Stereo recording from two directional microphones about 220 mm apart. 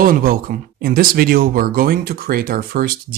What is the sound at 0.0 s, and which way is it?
Speech, 40° right (ahead or behind).